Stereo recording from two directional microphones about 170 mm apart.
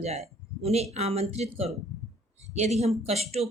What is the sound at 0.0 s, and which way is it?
Speech, 40° right (ahead or behind).